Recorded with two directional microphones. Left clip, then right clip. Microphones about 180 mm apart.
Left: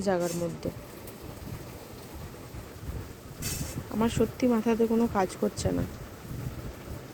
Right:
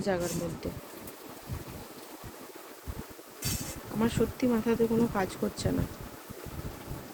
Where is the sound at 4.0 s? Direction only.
25° left (ahead or behind).